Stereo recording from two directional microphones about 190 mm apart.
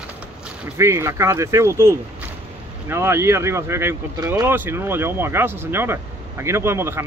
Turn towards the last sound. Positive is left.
turn(degrees=-15)  # may be behind; listen again after turning